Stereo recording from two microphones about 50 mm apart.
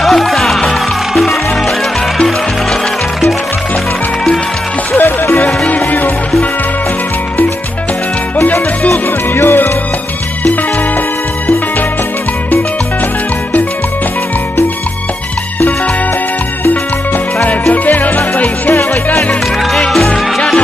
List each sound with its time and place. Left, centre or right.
0.0 s music: centre
4.9 s music: left
8.4 s music: left
17.4 s music: left
20.1 s music: centre